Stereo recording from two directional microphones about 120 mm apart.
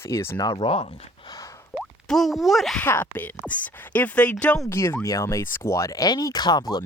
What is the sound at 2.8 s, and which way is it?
Speech, 15° left (ahead or behind).